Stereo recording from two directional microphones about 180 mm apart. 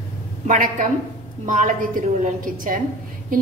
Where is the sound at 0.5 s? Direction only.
45° right (ahead or behind).